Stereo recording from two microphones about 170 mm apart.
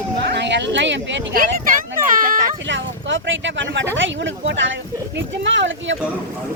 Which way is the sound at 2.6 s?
90° right.